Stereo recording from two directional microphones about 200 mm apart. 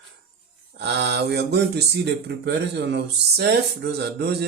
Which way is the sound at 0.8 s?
60° right (ahead or behind).